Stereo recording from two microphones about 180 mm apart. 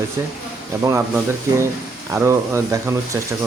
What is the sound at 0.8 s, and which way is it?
Speech, 15° right (ahead or behind).